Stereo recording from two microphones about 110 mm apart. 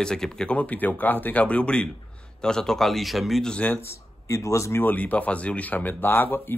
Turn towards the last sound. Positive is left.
turn(degrees=20)  # may be behind; listen again after turning